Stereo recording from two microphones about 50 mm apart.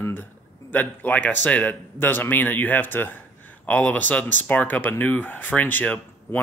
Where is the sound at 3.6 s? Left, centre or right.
Left.